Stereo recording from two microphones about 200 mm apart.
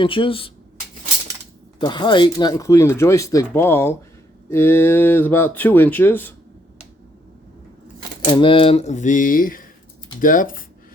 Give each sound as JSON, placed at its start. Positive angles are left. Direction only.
{"t": 0.0, "sound": "speech", "side_deg": 25}
{"t": 1.8, "sound": "speech", "side_deg": 25}
{"t": 8.3, "sound": "speech", "side_deg": 25}